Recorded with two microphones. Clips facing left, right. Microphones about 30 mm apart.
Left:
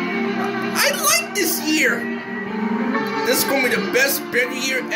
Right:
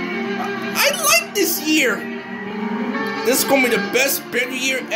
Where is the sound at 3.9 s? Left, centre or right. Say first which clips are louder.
Left 1 dB; centre.